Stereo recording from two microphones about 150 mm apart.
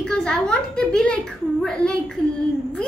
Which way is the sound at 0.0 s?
5° left (ahead or behind).